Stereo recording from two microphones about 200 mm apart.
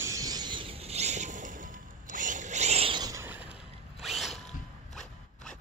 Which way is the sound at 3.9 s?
Centre (ahead or behind).